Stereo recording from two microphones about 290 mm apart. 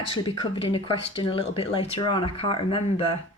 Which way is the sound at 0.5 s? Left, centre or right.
Centre.